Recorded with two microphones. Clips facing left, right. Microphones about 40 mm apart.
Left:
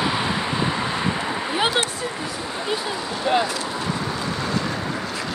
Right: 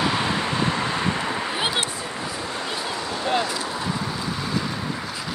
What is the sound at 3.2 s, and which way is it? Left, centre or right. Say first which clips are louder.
Vehicle: left 3 dB; centre.